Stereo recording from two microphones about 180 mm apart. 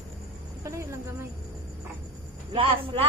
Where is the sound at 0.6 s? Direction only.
15° right (ahead or behind).